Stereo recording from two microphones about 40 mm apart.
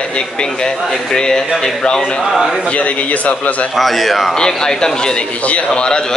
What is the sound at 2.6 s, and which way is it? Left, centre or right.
A man's voice, left.